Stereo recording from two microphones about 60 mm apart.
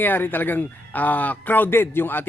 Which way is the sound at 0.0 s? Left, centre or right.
Left.